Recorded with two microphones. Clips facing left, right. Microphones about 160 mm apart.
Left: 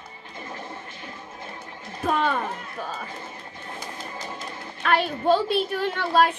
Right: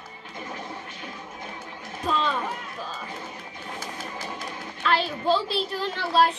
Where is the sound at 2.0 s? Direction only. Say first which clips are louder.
Left 2 dB; 55° left (ahead or behind).